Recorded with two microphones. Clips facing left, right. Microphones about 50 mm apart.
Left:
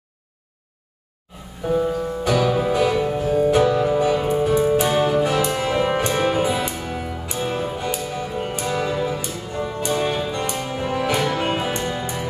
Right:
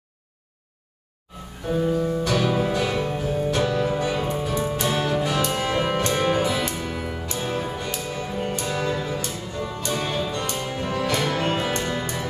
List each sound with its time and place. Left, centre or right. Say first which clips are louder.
1.7 s music: left 1 dB; centre